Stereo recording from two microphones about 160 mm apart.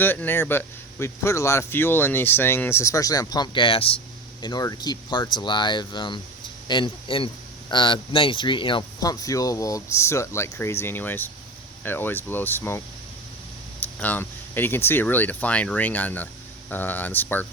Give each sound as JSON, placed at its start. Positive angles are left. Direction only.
{"t": 0.0, "sound": "speech", "side_deg": 10}
{"t": 14.0, "sound": "speech", "side_deg": 10}